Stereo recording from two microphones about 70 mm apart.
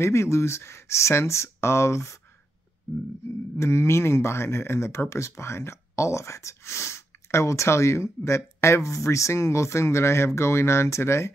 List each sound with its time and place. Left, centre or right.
0.0 s speech: left
3.5 s speech: left